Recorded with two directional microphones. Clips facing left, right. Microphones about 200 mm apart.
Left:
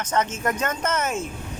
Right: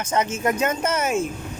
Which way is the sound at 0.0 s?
10° right (ahead or behind).